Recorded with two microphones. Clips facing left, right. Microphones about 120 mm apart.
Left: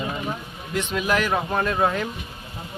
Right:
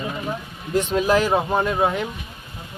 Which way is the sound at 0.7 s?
35° right (ahead or behind).